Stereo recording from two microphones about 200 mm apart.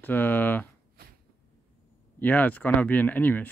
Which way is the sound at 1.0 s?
50° right (ahead or behind).